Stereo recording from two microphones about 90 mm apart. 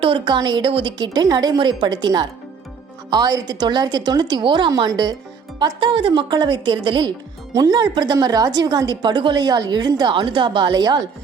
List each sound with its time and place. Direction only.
0.0 s speech: 75° right (ahead or behind)
0.3 s speech: 50° right (ahead or behind)
0.7 s speech: 70° right (ahead or behind); by 1.5 s 50° right (ahead or behind)
1.5 s a woman's voice: 60° right (ahead or behind)
4.8 s a woman's voice: 50° right (ahead or behind)
7.5 s speech: 45° right (ahead or behind)